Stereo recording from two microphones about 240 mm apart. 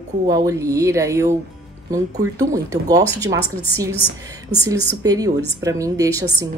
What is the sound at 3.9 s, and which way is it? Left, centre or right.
Speech, left.